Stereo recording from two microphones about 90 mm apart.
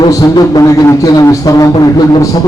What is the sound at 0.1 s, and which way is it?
A man's voice, 45° left (ahead or behind).